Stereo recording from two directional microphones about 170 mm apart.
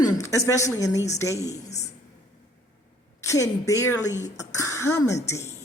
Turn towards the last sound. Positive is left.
turn(degrees=15)  # may be behind; listen again after turning